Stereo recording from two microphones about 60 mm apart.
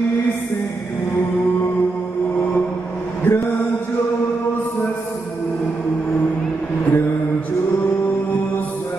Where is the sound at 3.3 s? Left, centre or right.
Left.